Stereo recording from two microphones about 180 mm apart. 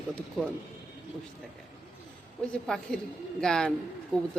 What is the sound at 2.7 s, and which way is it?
Speech, 5° left (ahead or behind).